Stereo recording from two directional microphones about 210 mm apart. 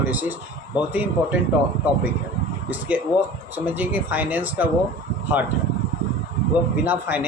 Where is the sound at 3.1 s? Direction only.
20° left (ahead or behind).